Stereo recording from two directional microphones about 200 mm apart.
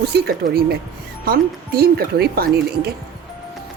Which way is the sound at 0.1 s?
55° right (ahead or behind).